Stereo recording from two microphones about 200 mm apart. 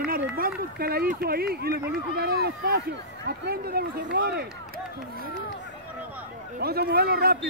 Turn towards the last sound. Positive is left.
turn(degrees=-50)  # may be behind; listen again after turning